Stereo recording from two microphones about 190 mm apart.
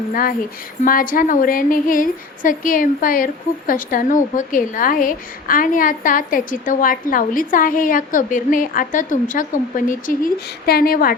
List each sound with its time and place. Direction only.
0.1 s a woman's voice: 50° left (ahead or behind)